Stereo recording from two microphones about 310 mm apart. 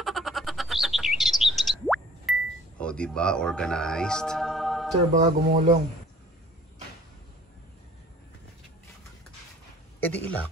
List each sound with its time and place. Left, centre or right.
0.0 s bird: centre
2.8 s speech: centre
5.1 s speech: right
9.9 s speech: centre